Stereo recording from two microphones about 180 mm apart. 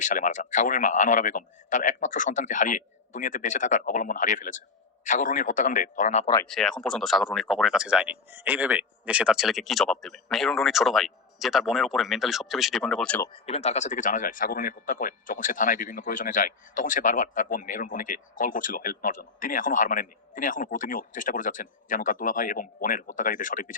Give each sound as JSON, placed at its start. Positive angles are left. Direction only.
{"t": 0.0, "sound": "speech", "side_deg": 45}
{"t": 6.5, "sound": "speech", "side_deg": 5}
{"t": 13.2, "sound": "speech", "side_deg": 30}